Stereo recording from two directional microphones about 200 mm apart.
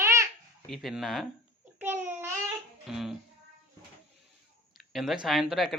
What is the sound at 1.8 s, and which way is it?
Babbling, 10° right (ahead or behind).